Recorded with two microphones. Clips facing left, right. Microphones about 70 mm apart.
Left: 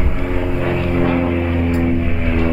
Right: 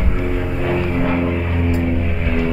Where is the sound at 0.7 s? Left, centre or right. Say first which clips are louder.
Left 2 dB; centre.